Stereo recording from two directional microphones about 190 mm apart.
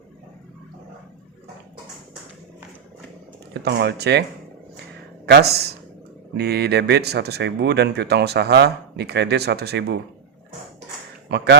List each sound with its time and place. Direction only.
3.5 s speech: 60° right (ahead or behind)
5.2 s speech: 60° right (ahead or behind)
11.3 s speech: 65° right (ahead or behind)